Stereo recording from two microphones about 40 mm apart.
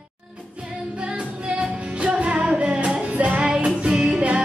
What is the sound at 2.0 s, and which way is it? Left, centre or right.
Music, right.